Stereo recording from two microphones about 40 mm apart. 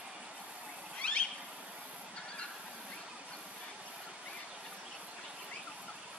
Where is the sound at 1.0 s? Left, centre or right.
Left.